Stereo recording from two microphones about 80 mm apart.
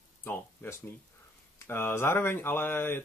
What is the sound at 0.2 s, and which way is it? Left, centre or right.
Speech, left.